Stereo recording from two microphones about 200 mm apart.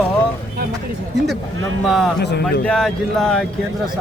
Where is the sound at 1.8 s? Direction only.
Centre (ahead or behind).